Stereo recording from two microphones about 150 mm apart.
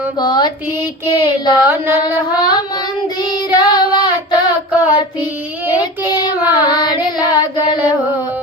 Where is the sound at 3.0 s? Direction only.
30° left (ahead or behind).